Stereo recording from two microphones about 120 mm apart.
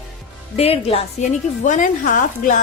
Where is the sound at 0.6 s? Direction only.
55° left (ahead or behind).